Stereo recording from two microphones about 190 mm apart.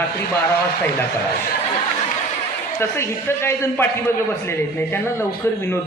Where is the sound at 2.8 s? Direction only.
15° left (ahead or behind).